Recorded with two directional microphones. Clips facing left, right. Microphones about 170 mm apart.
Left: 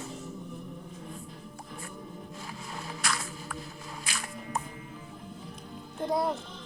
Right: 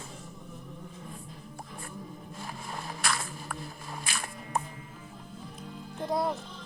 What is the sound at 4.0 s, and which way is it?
Music, 55° right (ahead or behind).